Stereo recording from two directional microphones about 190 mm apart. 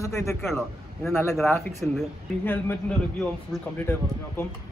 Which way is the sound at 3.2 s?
10° left (ahead or behind).